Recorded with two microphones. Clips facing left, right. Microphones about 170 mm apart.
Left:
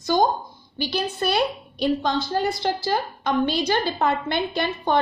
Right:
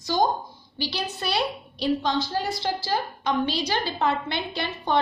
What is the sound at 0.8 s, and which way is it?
A woman's voice, 50° left (ahead or behind).